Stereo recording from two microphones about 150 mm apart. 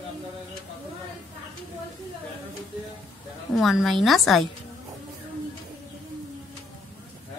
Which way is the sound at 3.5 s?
Centre (ahead or behind).